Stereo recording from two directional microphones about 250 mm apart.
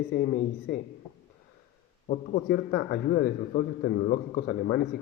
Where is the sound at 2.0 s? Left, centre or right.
Left.